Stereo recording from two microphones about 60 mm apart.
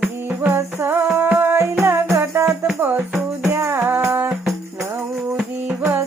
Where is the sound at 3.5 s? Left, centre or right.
Right.